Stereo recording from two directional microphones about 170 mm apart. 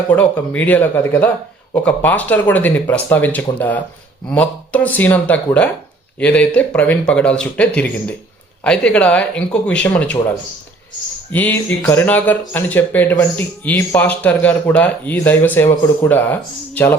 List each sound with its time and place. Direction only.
0.1 s speech: 10° left (ahead or behind)